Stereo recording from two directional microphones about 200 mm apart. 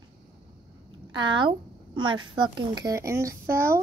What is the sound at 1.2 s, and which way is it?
Speech, 25° right (ahead or behind).